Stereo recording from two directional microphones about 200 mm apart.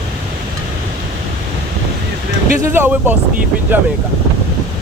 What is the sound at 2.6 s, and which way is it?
Speech, 10° right (ahead or behind).